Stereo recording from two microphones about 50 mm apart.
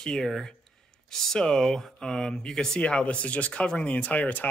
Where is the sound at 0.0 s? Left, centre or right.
Centre.